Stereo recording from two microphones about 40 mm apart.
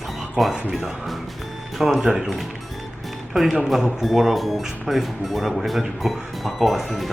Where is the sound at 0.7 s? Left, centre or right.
Centre.